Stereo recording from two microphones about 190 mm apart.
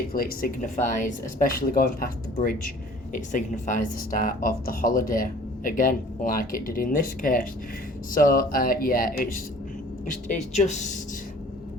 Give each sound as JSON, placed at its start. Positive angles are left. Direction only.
{"t": 0.1, "sound": "speech", "side_deg": 50}